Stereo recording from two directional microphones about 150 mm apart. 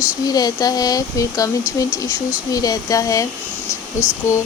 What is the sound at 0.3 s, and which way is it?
Speech, 25° left (ahead or behind).